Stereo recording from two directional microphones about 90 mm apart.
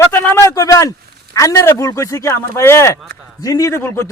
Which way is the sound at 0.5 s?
40° left (ahead or behind).